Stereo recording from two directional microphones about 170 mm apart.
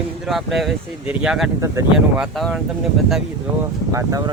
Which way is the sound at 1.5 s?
20° right (ahead or behind).